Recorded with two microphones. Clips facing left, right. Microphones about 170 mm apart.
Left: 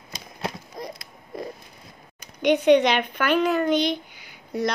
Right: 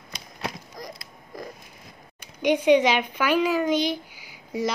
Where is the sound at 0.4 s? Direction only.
25° left (ahead or behind).